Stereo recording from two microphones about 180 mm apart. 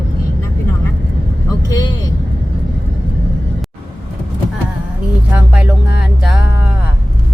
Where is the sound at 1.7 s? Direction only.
25° left (ahead or behind).